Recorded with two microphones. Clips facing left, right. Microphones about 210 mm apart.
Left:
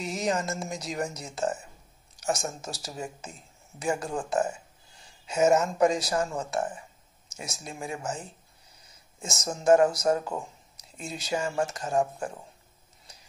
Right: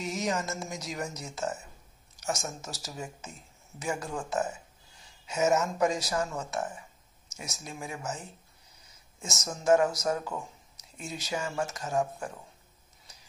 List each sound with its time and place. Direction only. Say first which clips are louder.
0.0 s speech: left 2 dB; 30° left (ahead or behind)
9.2 s speech: left 4 dB; 30° left (ahead or behind)